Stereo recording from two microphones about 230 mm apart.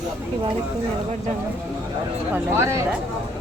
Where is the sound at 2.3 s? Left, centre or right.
Centre.